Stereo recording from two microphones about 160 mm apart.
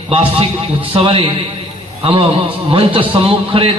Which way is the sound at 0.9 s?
35° right (ahead or behind).